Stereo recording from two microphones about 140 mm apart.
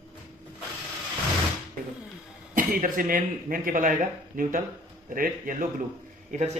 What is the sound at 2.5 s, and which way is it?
A man's voice, 80° right.